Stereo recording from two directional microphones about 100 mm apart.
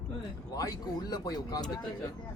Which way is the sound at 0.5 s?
40° left (ahead or behind).